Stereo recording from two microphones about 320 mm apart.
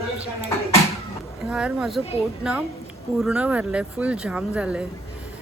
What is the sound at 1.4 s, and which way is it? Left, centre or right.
Speech, centre.